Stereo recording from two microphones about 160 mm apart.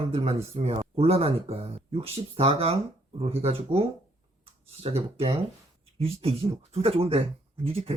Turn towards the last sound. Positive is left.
turn(degrees=-35)  # may be behind; listen again after turning